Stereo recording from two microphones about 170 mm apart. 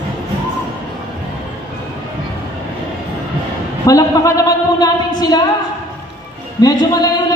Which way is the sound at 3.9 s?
20° left (ahead or behind).